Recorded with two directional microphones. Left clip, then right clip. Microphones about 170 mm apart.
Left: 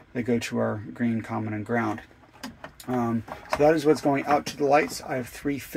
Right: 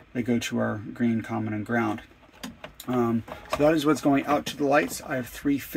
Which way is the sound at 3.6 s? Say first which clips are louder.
Left 2 dB; 15° right (ahead or behind).